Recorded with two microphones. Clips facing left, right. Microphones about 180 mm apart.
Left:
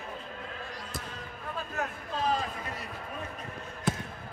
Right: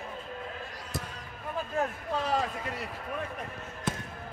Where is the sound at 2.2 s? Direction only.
70° right (ahead or behind).